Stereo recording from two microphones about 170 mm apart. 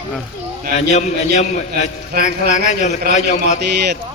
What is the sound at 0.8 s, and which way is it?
A man's voice, 45° left (ahead or behind).